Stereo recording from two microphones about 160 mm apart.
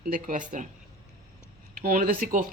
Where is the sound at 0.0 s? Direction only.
55° right (ahead or behind).